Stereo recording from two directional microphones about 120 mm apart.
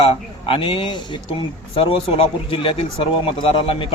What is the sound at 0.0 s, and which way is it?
Speech, 50° left (ahead or behind).